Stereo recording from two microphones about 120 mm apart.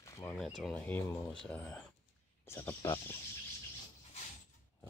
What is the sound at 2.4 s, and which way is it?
Speech, 20° left (ahead or behind).